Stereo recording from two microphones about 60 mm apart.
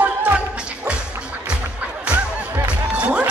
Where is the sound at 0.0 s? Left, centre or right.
Right.